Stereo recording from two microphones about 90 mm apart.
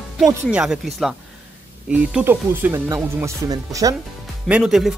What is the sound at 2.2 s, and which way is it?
Speech, 25° right (ahead or behind).